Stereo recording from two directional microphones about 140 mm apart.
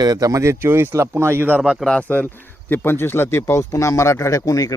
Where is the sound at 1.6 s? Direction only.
Centre (ahead or behind).